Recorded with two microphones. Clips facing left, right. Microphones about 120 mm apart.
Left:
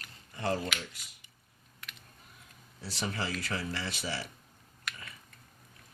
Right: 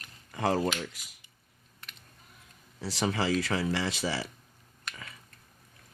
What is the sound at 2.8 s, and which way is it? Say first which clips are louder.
Speech: right 6 dB; 90° right.